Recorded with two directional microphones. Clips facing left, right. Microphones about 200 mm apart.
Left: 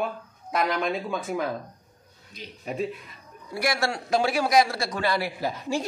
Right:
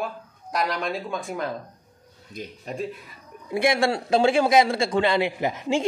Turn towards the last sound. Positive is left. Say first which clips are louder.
# right 4 dB
turn(degrees=-20)  # may be behind; listen again after turning